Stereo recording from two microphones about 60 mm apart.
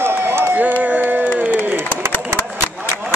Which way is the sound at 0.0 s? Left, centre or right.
Right.